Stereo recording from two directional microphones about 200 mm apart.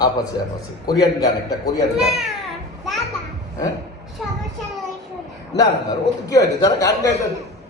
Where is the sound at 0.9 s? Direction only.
20° left (ahead or behind).